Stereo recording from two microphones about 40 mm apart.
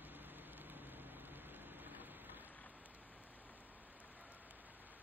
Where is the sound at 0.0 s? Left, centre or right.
Right.